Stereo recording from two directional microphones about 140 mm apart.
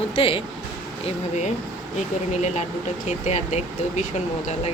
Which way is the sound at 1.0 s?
55° left (ahead or behind).